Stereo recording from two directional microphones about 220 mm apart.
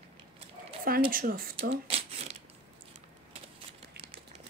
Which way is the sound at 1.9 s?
25° right (ahead or behind).